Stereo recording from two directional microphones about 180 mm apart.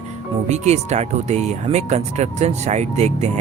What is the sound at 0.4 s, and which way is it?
Speech, 40° right (ahead or behind).